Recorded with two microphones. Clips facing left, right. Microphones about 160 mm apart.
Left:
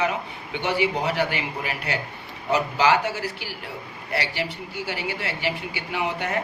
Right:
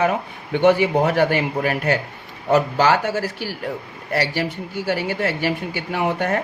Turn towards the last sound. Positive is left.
turn(degrees=-45)  # may be behind; listen again after turning